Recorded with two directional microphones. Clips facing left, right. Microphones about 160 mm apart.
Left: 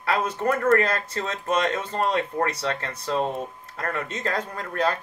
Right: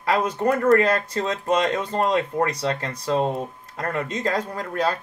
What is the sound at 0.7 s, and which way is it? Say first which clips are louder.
Speech: right 4 dB; 35° right (ahead or behind).